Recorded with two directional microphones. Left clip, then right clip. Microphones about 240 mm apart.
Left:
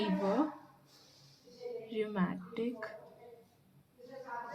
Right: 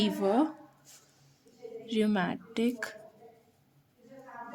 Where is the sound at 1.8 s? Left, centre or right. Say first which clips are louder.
Right 8 dB; right.